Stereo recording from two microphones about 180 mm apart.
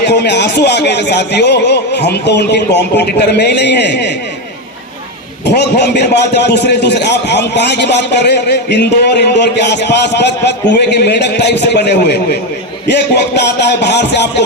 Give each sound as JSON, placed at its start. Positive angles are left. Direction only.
{"t": 0.0, "sound": "a man's voice", "side_deg": 70}
{"t": 5.5, "sound": "a man's voice", "side_deg": 70}